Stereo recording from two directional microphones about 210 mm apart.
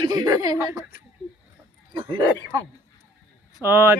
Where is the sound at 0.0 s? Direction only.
20° right (ahead or behind).